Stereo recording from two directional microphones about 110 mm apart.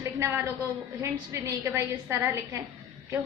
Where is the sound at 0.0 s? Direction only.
25° right (ahead or behind).